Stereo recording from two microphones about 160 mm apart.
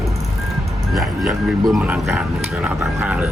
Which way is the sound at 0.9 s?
Centre (ahead or behind).